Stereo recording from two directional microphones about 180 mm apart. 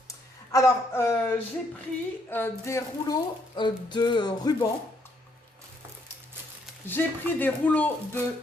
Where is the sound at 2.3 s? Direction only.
15° left (ahead or behind).